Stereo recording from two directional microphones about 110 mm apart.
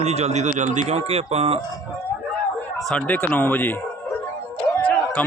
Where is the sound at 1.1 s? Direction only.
70° right (ahead or behind).